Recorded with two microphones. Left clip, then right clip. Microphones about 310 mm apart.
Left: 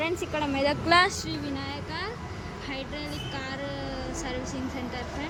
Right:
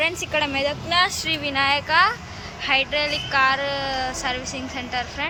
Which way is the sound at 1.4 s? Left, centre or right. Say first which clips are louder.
Right 14 dB; centre.